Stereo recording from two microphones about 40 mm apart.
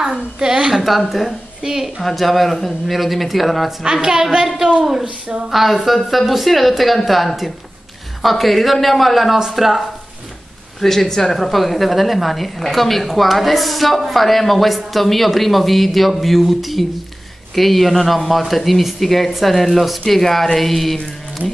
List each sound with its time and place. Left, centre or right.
0.4 s a woman's voice: centre
0.8 s a woman's voice: centre
1.6 s a woman's voice: centre
2.0 s a woman's voice: centre
3.8 s a woman's voice: centre
5.0 s a sound: right
5.5 s a woman's voice: centre
10.8 s a woman's voice: centre